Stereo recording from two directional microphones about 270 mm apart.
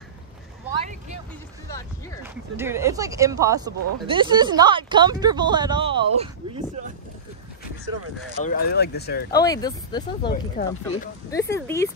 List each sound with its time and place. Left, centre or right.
2.2 s speech: centre
8.5 s speech: left
9.3 s speech: centre
10.6 s speech: left
11.2 s speech: centre